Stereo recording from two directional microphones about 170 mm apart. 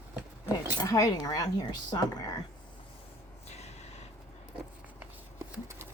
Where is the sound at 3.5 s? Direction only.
40° left (ahead or behind).